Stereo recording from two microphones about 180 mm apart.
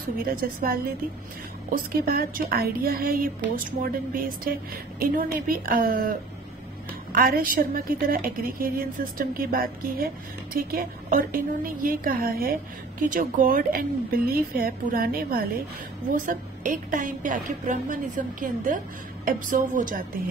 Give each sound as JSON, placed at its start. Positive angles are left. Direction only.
{"t": 0.3, "sound": "a woman's voice", "side_deg": -55}